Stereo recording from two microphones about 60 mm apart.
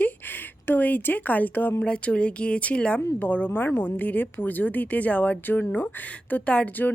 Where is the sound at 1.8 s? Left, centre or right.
Centre.